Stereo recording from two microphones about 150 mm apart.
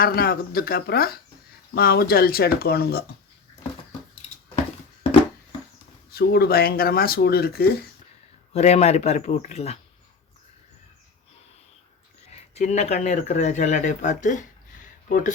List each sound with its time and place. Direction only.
0.0 s speech: 85° left
6.1 s speech: 90° left
8.5 s speech: 45° left (ahead or behind)
12.5 s speech: 50° left (ahead or behind)